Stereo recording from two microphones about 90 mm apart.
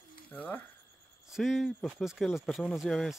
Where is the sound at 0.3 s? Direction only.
20° left (ahead or behind).